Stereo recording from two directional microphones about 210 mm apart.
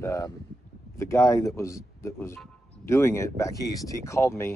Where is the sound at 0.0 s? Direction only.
15° left (ahead or behind).